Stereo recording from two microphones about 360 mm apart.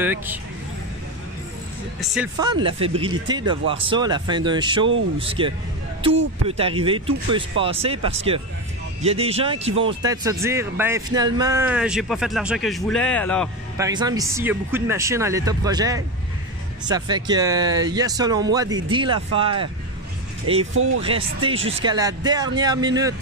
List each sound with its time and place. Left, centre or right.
0.0 s speech: centre
2.0 s speech: centre
6.5 s speech: centre
13.7 s speech: centre
20.7 s speech: right
21.0 s speech: centre